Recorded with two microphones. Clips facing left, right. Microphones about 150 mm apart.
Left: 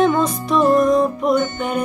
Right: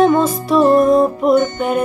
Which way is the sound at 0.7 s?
30° right (ahead or behind).